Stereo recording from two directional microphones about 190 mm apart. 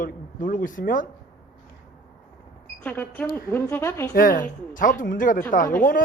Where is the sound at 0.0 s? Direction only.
45° left (ahead or behind).